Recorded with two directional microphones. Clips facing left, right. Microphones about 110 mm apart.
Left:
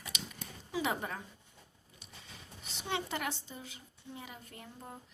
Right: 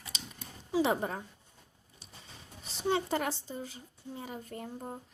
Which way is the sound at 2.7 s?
35° right (ahead or behind).